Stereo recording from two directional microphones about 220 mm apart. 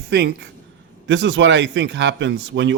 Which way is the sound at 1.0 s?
55° right (ahead or behind).